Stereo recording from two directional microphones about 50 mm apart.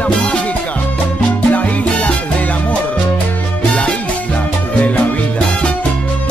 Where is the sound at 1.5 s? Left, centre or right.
Left.